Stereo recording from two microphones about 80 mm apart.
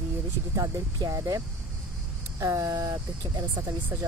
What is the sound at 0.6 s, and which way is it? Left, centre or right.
Speech, right.